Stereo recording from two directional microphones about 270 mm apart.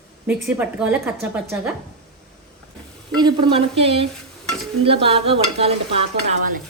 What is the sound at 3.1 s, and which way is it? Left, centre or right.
Stir, centre.